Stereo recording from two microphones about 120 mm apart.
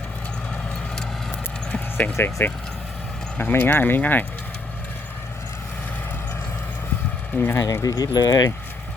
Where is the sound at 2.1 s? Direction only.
20° left (ahead or behind).